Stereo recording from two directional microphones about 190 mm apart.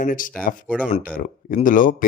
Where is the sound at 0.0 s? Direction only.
45° left (ahead or behind).